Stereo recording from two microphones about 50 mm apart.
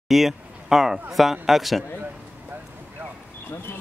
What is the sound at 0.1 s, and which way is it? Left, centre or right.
Speech, centre.